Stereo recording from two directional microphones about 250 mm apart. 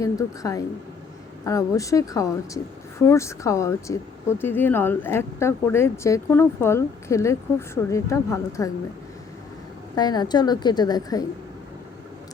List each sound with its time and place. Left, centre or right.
0.0 s speech: centre
9.9 s speech: centre